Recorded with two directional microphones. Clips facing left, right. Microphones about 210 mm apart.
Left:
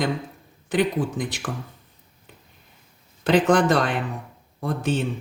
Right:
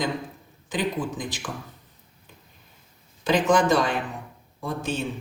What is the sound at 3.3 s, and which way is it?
Speech, 60° left (ahead or behind).